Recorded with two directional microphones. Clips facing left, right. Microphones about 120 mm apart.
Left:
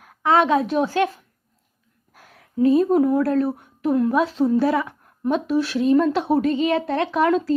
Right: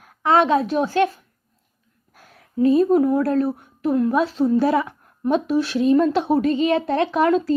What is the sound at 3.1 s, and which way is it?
Speech, 30° right (ahead or behind).